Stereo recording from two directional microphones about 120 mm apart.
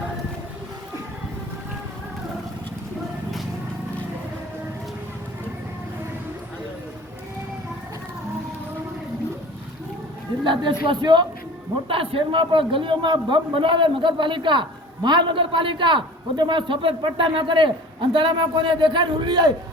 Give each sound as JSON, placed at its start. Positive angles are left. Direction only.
{"t": 10.4, "sound": "a woman's voice", "side_deg": -40}
{"t": 11.9, "sound": "a man's voice", "side_deg": -50}